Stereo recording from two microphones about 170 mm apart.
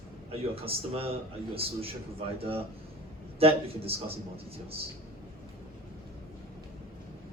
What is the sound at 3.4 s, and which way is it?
Speech, 35° right (ahead or behind).